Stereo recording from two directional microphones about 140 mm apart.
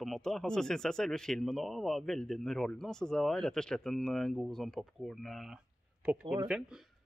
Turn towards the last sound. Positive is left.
turn(degrees=-5)  # may be behind; listen again after turning